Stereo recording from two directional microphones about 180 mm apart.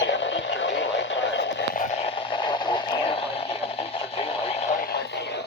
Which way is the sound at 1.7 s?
45° left (ahead or behind).